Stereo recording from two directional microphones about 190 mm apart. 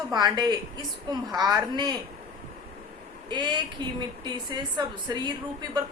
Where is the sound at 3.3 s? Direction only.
20° right (ahead or behind).